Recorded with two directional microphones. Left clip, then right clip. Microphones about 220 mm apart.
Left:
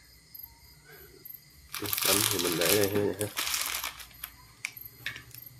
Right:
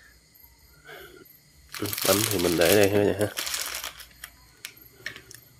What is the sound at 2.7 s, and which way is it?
Speech, 40° right (ahead or behind).